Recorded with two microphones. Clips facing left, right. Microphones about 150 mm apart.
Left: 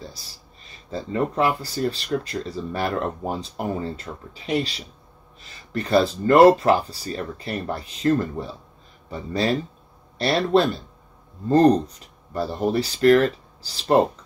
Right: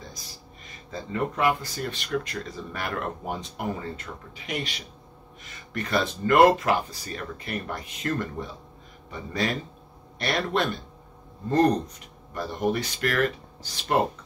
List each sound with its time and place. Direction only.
0.8 s speech: 30° left (ahead or behind)